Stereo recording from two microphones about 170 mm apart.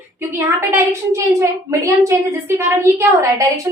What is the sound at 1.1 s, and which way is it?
A woman's voice, 20° right (ahead or behind).